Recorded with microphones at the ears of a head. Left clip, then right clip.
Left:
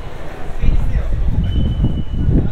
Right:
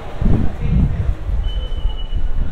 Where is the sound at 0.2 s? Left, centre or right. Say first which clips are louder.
Right 8 dB; right.